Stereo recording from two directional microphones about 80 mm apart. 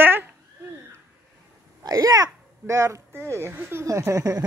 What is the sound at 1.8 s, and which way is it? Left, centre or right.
Hiccup, right.